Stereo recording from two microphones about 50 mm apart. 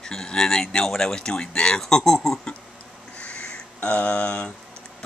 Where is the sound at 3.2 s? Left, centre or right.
Centre.